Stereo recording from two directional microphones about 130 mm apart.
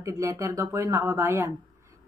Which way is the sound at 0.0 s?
25° right (ahead or behind).